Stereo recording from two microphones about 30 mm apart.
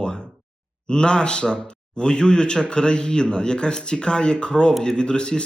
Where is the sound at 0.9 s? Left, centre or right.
Left.